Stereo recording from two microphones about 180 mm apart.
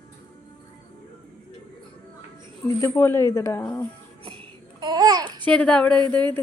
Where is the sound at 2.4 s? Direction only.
15° left (ahead or behind).